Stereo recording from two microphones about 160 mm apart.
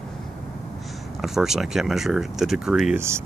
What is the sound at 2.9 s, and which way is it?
Speech, 15° right (ahead or behind).